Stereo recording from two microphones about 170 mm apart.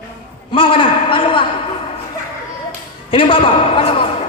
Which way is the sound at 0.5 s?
30° left (ahead or behind).